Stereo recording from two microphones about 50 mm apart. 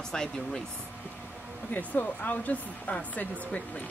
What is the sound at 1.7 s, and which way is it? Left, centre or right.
Speech, left.